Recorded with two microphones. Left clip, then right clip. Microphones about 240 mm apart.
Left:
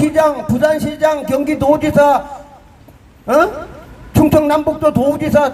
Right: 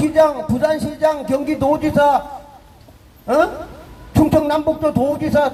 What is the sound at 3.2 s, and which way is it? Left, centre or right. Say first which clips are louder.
A man's voice: left 3 dB; left.